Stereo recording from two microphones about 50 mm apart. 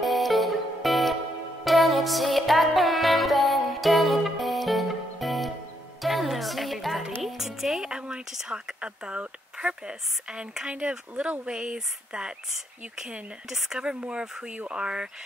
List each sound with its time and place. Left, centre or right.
0.0 s music: centre
7.2 s speech: centre
7.9 s speech: centre
8.3 s speech: centre
8.8 s speech: right
13.5 s speech: centre